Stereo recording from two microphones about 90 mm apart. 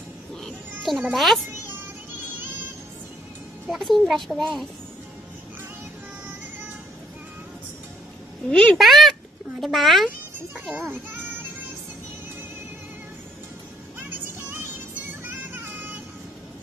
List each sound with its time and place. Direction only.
0.4 s cat: centre (ahead or behind)
1.1 s a child's voice: centre (ahead or behind)
3.6 s a child's voice: centre (ahead or behind)
8.5 s a woman's voice: 10° left (ahead or behind)
8.7 s a child's voice: centre (ahead or behind)
10.8 s a child's voice: 25° right (ahead or behind)
14.5 s music: 20° right (ahead or behind)